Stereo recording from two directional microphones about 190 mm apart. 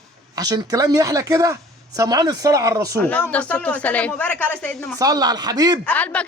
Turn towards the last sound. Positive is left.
turn(degrees=5)  # may be behind; listen again after turning